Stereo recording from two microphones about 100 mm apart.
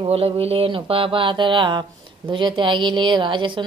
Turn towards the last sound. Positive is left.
turn(degrees=-55)  # may be behind; listen again after turning